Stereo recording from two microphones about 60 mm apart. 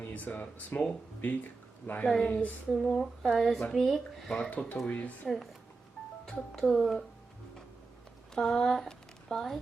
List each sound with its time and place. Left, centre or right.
0.1 s speech: left
2.0 s speech: centre
2.3 s speech: left
2.9 s speech: centre
4.3 s speech: centre
4.9 s speech: left
6.2 s speech: centre
8.4 s speech: centre